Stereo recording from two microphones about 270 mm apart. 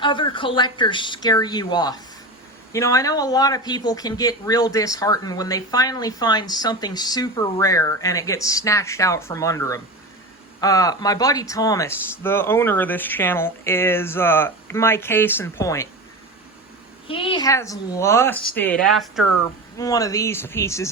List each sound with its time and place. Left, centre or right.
0.0 s speech: centre
17.1 s speech: centre
19.7 s speech: centre